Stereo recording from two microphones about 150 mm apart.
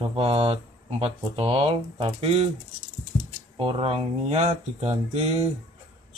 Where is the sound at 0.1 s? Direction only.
40° right (ahead or behind).